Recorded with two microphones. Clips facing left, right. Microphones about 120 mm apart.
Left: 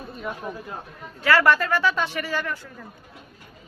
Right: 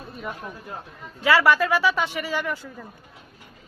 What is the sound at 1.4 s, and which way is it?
Speech, 5° right (ahead or behind).